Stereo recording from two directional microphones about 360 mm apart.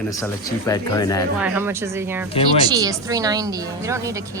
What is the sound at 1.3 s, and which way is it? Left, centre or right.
Speech, centre.